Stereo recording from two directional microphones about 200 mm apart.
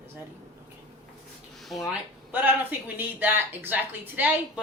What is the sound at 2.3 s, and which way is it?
Speech, 10° right (ahead or behind).